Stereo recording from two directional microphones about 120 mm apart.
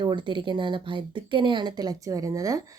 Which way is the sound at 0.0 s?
40° right (ahead or behind).